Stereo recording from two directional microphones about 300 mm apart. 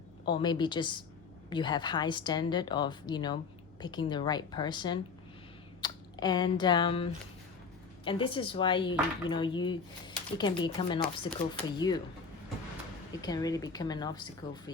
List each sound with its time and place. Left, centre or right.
0.3 s speech: centre
13.2 s speech: centre